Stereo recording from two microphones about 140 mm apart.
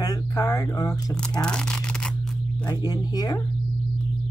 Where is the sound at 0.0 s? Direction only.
25° left (ahead or behind).